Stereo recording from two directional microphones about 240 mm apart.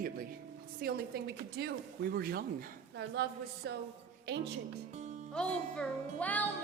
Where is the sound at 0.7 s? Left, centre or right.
Right.